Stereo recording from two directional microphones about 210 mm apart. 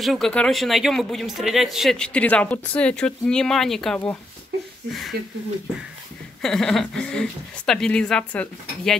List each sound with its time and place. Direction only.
0.0 s a man's voice: centre (ahead or behind)
5.1 s speech: 50° right (ahead or behind)
6.4 s a man's voice: centre (ahead or behind)